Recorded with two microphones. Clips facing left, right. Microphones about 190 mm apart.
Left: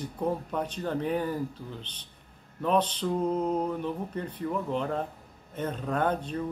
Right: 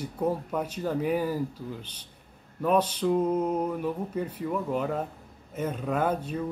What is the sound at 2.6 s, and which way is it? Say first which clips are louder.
A man's voice: right 2 dB; 10° right (ahead or behind).